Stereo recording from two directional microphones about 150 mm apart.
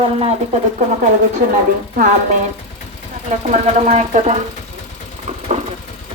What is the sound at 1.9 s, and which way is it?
Speech, 55° right (ahead or behind).